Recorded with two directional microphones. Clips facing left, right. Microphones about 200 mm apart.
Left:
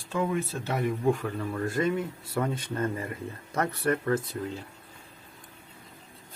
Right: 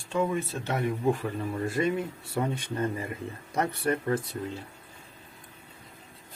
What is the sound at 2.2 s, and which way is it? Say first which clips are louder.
Speech: even; 25° right (ahead or behind).